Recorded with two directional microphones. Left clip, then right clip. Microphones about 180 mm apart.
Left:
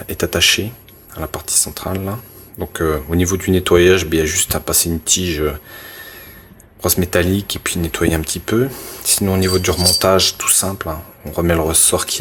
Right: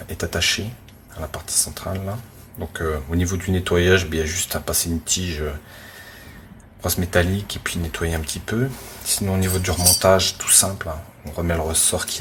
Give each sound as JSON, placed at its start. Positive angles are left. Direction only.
{"t": 0.2, "sound": "speech", "side_deg": 45}
{"t": 6.8, "sound": "speech", "side_deg": 45}